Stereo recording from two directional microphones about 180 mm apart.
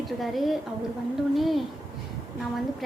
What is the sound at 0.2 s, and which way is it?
A woman's voice, centre (ahead or behind).